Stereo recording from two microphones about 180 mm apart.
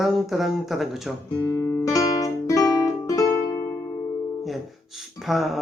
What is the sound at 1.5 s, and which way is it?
Guitar, 15° left (ahead or behind).